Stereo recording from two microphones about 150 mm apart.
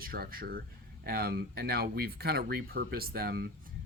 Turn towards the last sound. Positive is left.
turn(degrees=-90)